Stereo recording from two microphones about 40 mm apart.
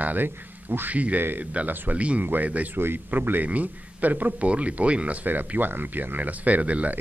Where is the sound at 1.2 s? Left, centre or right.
Right.